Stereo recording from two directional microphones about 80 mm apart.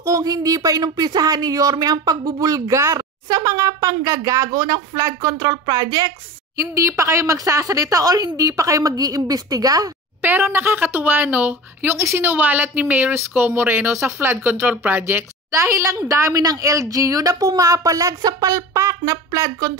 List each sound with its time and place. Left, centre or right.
0.0 s speech: right
10.2 s a woman's voice: right